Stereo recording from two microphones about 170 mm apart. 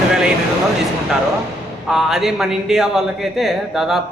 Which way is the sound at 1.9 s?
Centre (ahead or behind).